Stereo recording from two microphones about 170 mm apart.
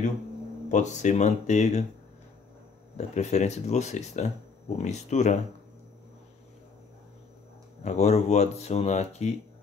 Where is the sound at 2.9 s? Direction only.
40° left (ahead or behind).